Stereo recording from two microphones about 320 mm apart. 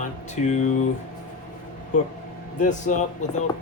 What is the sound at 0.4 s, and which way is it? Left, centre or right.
Speech, left.